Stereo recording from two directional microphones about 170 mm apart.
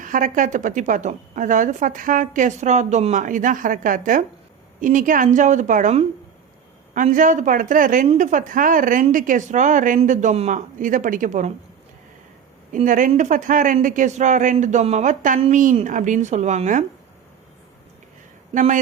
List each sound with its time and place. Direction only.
0.0 s a woman's voice: 50° right (ahead or behind)
12.7 s a woman's voice: 50° right (ahead or behind)
18.5 s a woman's voice: 50° right (ahead or behind)